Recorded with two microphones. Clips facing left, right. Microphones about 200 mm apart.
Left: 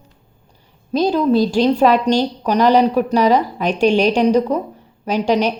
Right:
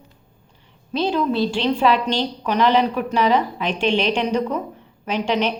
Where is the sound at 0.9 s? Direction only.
40° left (ahead or behind).